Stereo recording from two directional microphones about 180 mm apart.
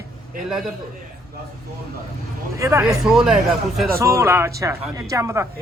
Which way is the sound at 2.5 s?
15° right (ahead or behind).